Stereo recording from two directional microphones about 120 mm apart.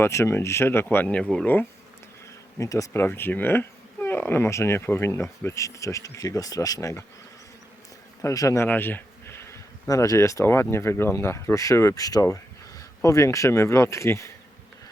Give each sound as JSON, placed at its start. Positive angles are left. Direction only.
{"t": 0.0, "sound": "speech", "side_deg": 25}
{"t": 1.2, "sound": "speech", "side_deg": 5}
{"t": 2.6, "sound": "speech", "side_deg": 25}
{"t": 8.2, "sound": "speech", "side_deg": 25}